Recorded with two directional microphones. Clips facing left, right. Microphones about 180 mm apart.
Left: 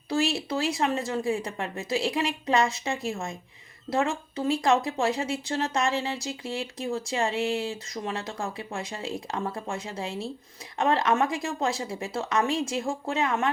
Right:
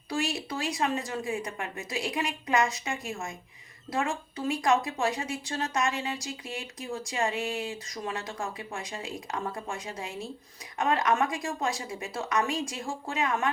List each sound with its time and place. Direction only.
0.1 s speech: 25° left (ahead or behind)